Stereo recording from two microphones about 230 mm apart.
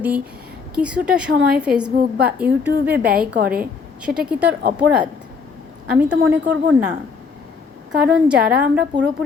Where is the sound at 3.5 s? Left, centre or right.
Centre.